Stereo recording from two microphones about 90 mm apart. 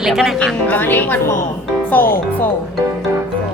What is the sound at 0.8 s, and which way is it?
Speech, 20° left (ahead or behind).